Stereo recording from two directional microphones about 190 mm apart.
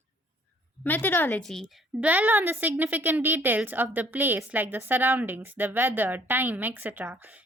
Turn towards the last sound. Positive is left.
turn(degrees=-10)  # may be behind; listen again after turning